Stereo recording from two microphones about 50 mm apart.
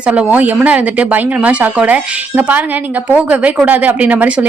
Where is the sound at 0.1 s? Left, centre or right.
Right.